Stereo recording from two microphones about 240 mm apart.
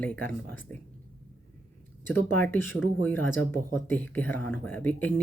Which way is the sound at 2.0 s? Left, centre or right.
Centre.